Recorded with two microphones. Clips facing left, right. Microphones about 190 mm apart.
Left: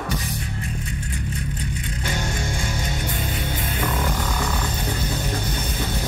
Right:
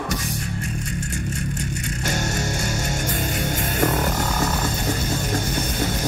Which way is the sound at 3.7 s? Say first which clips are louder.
Right 4 dB; 45° right (ahead or behind).